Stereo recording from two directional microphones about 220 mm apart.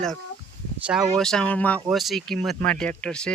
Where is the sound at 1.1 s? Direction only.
Centre (ahead or behind).